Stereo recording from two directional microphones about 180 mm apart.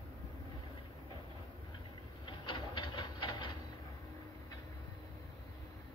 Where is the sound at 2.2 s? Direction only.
25° left (ahead or behind).